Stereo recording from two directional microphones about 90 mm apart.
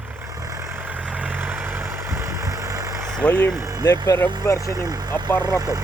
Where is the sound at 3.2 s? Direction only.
15° left (ahead or behind).